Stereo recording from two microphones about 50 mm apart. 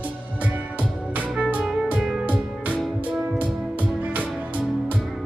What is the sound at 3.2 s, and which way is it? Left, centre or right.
Music, right.